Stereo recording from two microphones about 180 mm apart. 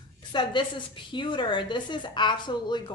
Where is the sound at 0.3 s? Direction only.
25° left (ahead or behind).